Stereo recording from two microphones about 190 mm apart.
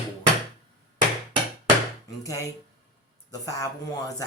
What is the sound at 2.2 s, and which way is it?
A woman's voice, 15° left (ahead or behind).